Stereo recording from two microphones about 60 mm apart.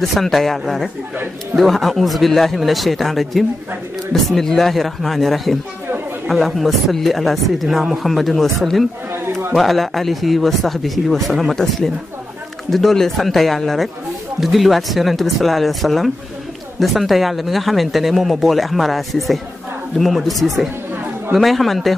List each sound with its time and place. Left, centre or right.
0.0 s speech: centre
9.1 s a sound: right
9.6 s speech: centre